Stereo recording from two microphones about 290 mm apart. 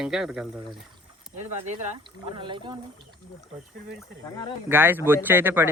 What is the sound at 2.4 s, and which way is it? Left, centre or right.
Speech, centre.